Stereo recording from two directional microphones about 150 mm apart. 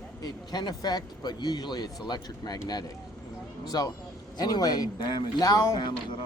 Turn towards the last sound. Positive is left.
turn(degrees=25)  # may be behind; listen again after turning